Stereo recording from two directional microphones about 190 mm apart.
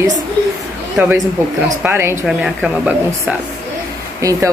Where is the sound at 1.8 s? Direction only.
10° right (ahead or behind).